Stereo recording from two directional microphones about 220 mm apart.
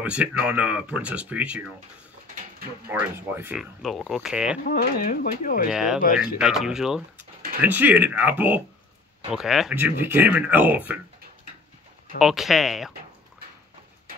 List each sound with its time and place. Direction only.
0.0 s speech: 5° right (ahead or behind)
2.9 s speech: 10° right (ahead or behind)
4.6 s speech: 40° left (ahead or behind)
5.7 s speech: 5° right (ahead or behind)
12.2 s speech: centre (ahead or behind)